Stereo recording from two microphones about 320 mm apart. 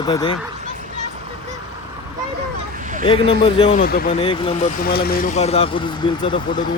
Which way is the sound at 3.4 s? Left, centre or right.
Centre.